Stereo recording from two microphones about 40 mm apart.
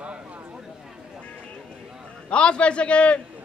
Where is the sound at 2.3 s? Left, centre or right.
Left.